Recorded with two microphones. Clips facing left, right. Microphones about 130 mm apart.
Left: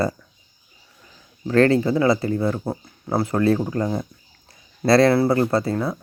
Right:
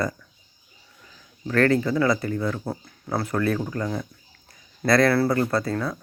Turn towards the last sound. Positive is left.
turn(degrees=25)  # may be behind; listen again after turning